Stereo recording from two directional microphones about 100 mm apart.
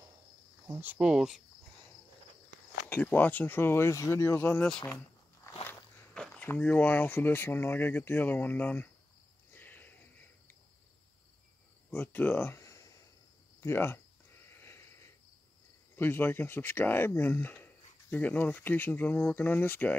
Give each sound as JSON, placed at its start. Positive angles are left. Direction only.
{"t": 0.7, "sound": "speech", "side_deg": -20}
{"t": 0.9, "sound": "speech", "side_deg": -5}
{"t": 2.9, "sound": "speech", "side_deg": 15}
{"t": 4.6, "sound": "speech", "side_deg": 10}
{"t": 6.1, "sound": "speech", "side_deg": 10}
{"t": 9.5, "sound": "a sound", "side_deg": 20}
{"t": 11.9, "sound": "speech", "side_deg": 15}
{"t": 14.5, "sound": "a sound", "side_deg": 25}
{"t": 16.0, "sound": "speech", "side_deg": 20}